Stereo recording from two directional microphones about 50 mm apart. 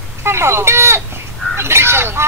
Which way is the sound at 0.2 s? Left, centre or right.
Right.